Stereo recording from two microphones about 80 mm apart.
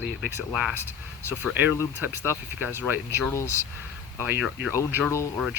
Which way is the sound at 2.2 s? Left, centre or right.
Right.